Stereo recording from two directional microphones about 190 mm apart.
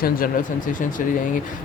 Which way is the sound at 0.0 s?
45° left (ahead or behind).